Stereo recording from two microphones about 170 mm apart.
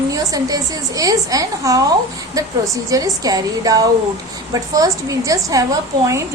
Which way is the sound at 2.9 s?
20° right (ahead or behind).